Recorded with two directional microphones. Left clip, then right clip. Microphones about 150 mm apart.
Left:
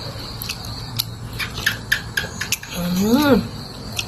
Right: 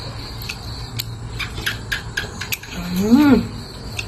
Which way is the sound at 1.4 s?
70° right (ahead or behind).